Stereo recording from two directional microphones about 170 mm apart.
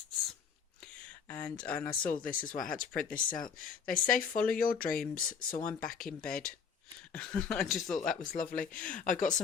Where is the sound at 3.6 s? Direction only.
55° left (ahead or behind).